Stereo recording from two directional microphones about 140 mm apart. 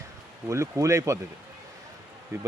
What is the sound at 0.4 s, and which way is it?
Speech, 20° right (ahead or behind).